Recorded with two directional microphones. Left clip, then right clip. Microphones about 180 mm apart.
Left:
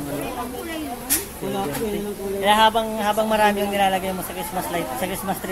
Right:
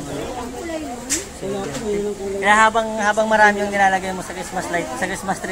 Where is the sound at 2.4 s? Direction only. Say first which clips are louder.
Right 2 dB; 15° left (ahead or behind).